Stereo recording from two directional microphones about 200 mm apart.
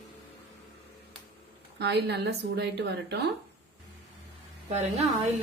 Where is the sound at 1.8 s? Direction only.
55° right (ahead or behind).